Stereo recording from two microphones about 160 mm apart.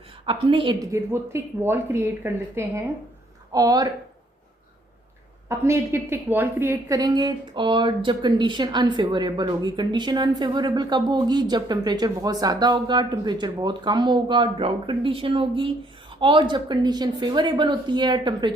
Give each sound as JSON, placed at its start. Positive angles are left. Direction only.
{"t": 0.3, "sound": "a woman's voice", "side_deg": -30}
{"t": 0.9, "sound": "a woman's voice", "side_deg": -15}
{"t": 5.5, "sound": "a woman's voice", "side_deg": -15}